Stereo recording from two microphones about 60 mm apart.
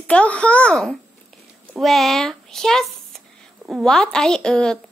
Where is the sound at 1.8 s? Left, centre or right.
Centre.